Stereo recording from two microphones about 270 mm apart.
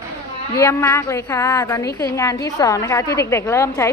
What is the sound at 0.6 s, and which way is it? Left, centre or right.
A woman's voice, centre.